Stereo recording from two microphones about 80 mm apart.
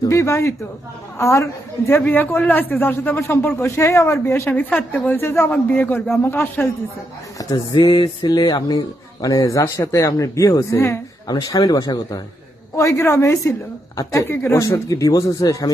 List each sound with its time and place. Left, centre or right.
0.1 s a man's voice: left
1.9 s speech: left
3.6 s speech: left
4.5 s speech: centre
5.5 s speech: centre
7.3 s speech: left
7.8 s mantra: left
9.2 s speech: left
11.4 s mantra: left
12.7 s speech: left
14.3 s speech: left
14.6 s speech: left